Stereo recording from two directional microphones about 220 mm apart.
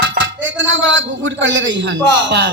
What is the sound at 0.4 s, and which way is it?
A man's voice, 60° right (ahead or behind).